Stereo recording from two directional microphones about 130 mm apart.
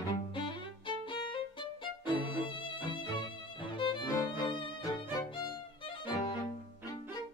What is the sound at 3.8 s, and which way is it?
Music, 35° left (ahead or behind).